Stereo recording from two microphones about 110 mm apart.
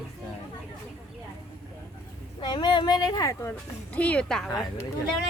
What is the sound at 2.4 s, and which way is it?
Speech, 40° left (ahead or behind).